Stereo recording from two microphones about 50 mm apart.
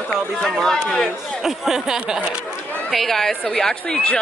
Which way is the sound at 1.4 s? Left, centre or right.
Centre.